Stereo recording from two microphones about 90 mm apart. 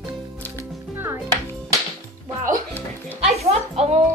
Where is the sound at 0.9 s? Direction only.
25° right (ahead or behind).